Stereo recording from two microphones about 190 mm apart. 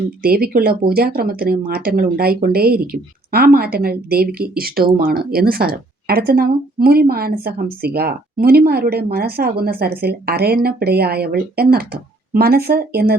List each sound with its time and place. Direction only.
0.2 s speech: 55° right (ahead or behind)